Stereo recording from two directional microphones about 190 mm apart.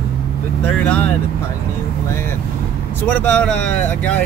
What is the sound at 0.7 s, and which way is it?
Speech, 5° left (ahead or behind).